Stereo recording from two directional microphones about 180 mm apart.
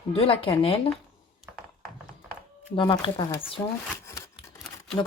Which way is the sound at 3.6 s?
15° left (ahead or behind).